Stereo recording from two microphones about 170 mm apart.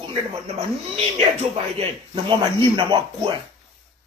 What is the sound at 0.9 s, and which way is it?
Speech, 35° right (ahead or behind).